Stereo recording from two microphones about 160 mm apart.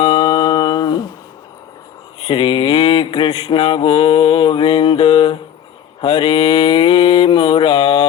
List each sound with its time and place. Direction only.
0.2 s humming: 25° left (ahead or behind)
2.2 s mantra: 35° left (ahead or behind)